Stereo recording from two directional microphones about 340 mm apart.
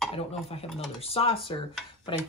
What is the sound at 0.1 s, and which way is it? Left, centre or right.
Speech, centre.